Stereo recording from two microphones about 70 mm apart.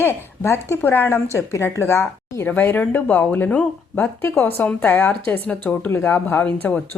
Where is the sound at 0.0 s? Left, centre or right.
Left.